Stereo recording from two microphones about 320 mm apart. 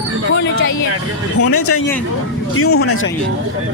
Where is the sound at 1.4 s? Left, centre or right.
Left.